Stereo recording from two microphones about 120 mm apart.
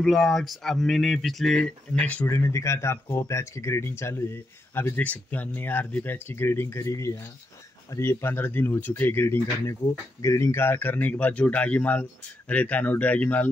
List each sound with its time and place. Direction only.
0.0 s speech: centre (ahead or behind)
2.2 s speech: 25° left (ahead or behind)